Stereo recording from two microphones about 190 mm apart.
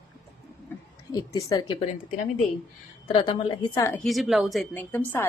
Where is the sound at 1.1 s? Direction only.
20° left (ahead or behind).